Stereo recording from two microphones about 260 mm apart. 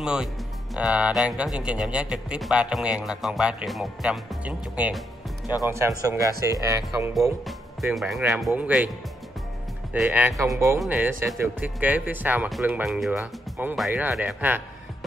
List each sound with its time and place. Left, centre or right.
0.0 s a man's voice: centre
7.4 s a man's voice: centre
9.9 s speech: centre